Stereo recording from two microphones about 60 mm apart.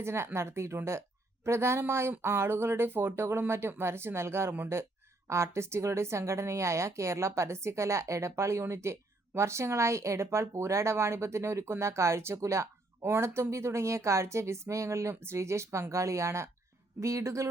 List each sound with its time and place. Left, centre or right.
0.0 s a woman's voice: right